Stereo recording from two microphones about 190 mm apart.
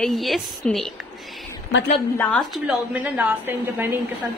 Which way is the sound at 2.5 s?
5° right (ahead or behind).